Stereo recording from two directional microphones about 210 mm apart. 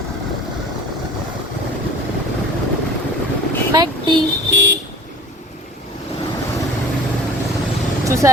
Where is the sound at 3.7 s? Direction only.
20° right (ahead or behind).